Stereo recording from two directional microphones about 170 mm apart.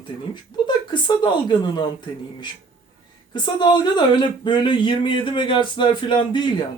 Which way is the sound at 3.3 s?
25° left (ahead or behind).